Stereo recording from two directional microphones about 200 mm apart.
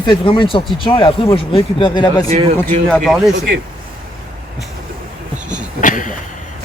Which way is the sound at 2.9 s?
Centre (ahead or behind).